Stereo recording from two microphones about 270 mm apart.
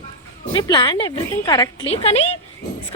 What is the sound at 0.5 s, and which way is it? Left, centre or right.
A woman's voice, centre.